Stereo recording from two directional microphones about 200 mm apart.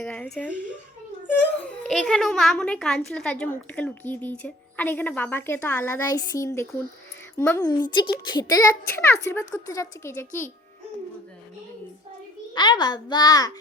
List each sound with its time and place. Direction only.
0.0 s a woman's voice: 5° left (ahead or behind)
0.5 s speech: 40° right (ahead or behind)
1.9 s a child's voice: centre (ahead or behind)
12.5 s a child's voice: 20° left (ahead or behind)